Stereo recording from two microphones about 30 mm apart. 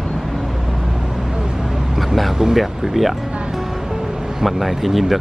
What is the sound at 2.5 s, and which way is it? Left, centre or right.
Speech, centre.